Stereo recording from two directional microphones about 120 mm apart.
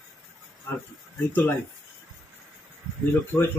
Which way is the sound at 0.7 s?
15° left (ahead or behind).